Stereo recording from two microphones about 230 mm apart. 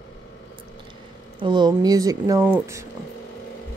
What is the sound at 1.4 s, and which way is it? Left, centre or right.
Speech, centre.